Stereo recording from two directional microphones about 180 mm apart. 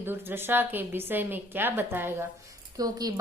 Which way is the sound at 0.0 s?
10° right (ahead or behind).